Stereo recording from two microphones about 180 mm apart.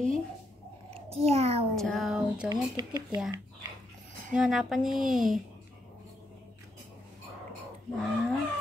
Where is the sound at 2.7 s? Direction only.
20° right (ahead or behind).